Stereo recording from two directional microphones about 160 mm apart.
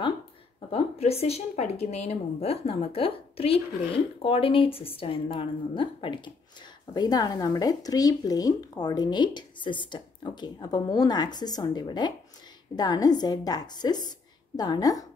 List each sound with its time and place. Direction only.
0.7 s speech: 40° left (ahead or behind); by 15.0 s 20° left (ahead or behind)